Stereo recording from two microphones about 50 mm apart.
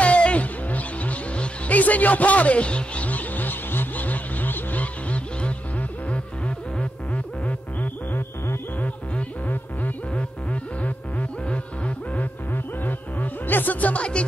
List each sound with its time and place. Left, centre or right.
0.0 s music: left
5.1 s music: left
7.4 s music: left
10.1 s music: left
12.5 s music: left